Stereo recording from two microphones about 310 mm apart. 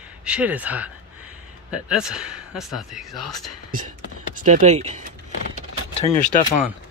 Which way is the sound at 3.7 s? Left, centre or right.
Right.